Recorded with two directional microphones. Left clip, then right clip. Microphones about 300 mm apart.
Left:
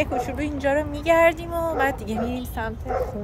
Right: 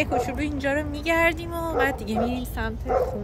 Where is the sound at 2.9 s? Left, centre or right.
Centre.